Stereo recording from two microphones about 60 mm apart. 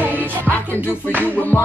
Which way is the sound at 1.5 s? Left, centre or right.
Left.